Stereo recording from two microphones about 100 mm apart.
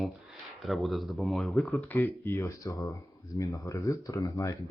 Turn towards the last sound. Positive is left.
turn(degrees=35)  # may be behind; listen again after turning